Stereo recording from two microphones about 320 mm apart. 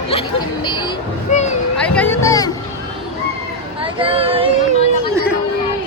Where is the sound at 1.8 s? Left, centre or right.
Centre.